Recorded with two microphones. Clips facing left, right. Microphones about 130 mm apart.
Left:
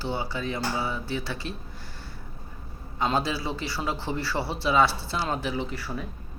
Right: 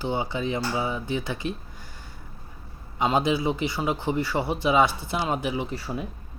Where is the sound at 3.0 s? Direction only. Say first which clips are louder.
Right 4 dB; 15° right (ahead or behind).